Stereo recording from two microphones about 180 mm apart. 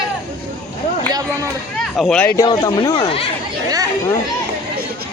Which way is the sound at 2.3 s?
20° left (ahead or behind).